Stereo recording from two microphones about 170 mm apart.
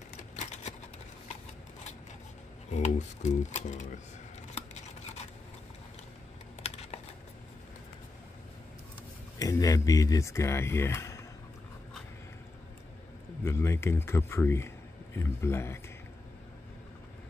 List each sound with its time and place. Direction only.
0.4 s a sound: 45° left (ahead or behind)
2.7 s speech: 45° left (ahead or behind)
4.6 s toothbrush: 40° left (ahead or behind)
6.6 s typing: 35° left (ahead or behind)
9.4 s speech: 20° left (ahead or behind)
13.4 s speech: 15° left (ahead or behind)